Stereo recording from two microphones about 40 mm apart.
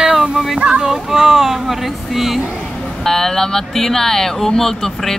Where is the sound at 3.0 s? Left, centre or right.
Centre.